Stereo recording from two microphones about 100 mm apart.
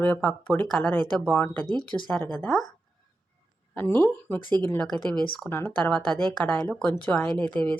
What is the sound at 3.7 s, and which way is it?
Speech, 20° left (ahead or behind).